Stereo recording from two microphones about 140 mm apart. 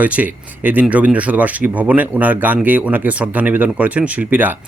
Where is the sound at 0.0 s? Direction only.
10° right (ahead or behind).